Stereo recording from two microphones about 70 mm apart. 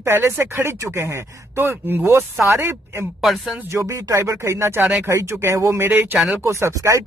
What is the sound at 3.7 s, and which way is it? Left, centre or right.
Speech, right.